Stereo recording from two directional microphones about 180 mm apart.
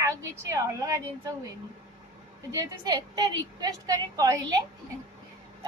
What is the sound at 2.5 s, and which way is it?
A woman's voice, 20° right (ahead or behind).